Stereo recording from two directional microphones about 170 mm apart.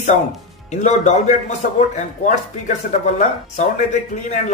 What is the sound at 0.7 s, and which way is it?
Speech, 45° left (ahead or behind).